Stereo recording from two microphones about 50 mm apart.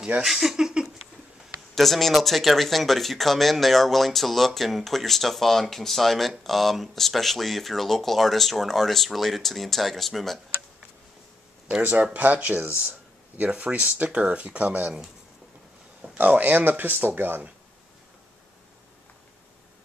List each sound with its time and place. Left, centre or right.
0.2 s speech: centre
1.8 s speech: centre
11.8 s speech: right
16.0 s speech: right